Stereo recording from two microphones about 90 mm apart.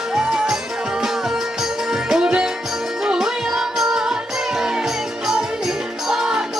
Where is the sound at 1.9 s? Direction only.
5° right (ahead or behind).